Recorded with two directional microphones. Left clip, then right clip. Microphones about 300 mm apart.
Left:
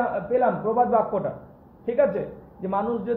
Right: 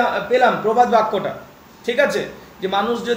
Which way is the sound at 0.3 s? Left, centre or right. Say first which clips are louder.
Right 6 dB; centre.